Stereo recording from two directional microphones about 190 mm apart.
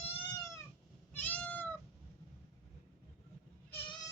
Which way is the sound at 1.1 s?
5° left (ahead or behind).